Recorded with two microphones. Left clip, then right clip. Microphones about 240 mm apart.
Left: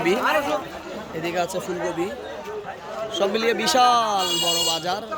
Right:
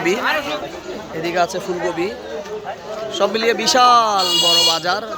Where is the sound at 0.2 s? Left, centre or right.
Left.